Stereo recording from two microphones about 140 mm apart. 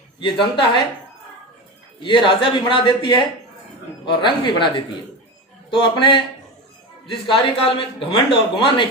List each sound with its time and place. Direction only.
0.2 s a man's voice: 35° left (ahead or behind)
2.0 s a man's voice: 35° left (ahead or behind)